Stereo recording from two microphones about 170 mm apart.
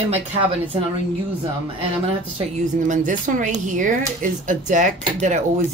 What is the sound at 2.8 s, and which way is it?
Speech, 50° right (ahead or behind).